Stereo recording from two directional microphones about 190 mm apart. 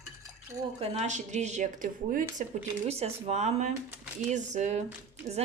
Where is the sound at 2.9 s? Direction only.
35° right (ahead or behind).